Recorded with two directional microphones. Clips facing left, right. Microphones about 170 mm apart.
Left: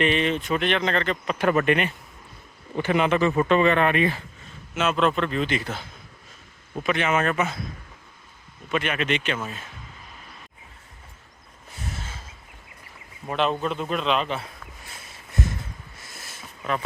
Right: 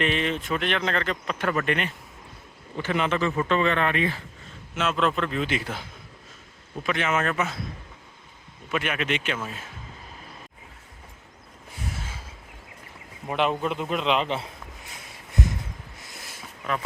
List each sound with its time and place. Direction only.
0.0 s speech: centre (ahead or behind)
1.3 s speech: 15° left (ahead or behind); by 5.8 s 10° right (ahead or behind)
6.8 s speech: centre (ahead or behind)
8.7 s a man's voice: 5° right (ahead or behind)
11.7 s a sound: 10° right (ahead or behind)
13.2 s a man's voice: 15° right (ahead or behind)
14.8 s a sound: 15° right (ahead or behind)